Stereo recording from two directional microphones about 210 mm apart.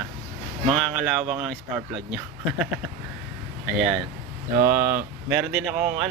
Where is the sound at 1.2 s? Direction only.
30° right (ahead or behind).